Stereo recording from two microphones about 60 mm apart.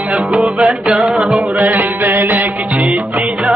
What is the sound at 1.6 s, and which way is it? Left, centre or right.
Music, right.